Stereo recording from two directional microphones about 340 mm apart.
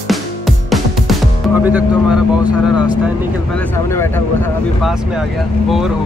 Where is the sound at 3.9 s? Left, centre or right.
Centre.